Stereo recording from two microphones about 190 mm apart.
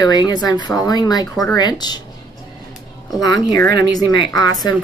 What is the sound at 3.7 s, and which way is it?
Speech, 65° right (ahead or behind).